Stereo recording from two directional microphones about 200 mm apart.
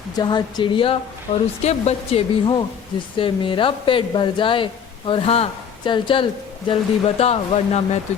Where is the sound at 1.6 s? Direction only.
30° left (ahead or behind).